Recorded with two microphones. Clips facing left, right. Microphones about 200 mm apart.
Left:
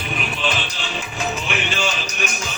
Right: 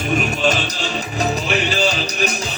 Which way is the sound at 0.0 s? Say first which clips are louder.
Right 7 dB; 45° right (ahead or behind).